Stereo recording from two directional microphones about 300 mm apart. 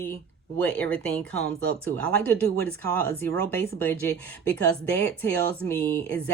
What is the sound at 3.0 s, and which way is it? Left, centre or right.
Speech, centre.